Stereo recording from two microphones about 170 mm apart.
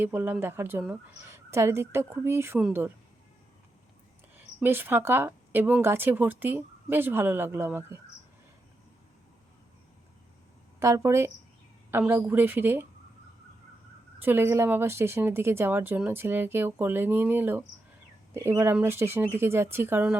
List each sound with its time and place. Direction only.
0.0 s speech: 10° right (ahead or behind)
4.4 s speech: 10° right (ahead or behind)
10.8 s speech: 15° right (ahead or behind)
14.2 s speech: 10° right (ahead or behind)